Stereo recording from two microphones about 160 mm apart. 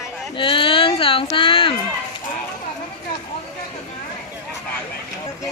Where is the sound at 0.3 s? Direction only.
30° left (ahead or behind).